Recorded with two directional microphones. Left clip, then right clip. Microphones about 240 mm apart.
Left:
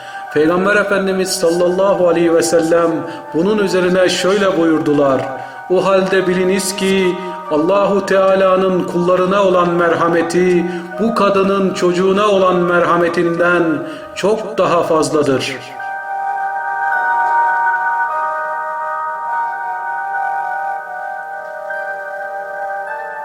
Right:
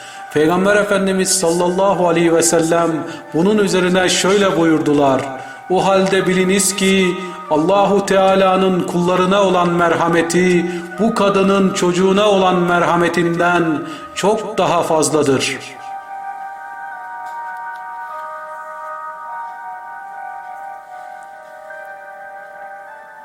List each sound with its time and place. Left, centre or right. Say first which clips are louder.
0.3 s a man's voice: left 1 dB; centre